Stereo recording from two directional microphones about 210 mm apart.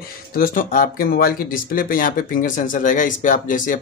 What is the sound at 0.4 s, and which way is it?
Speech, 40° left (ahead or behind).